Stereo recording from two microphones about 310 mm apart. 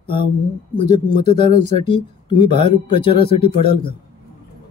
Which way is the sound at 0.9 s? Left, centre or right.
Right.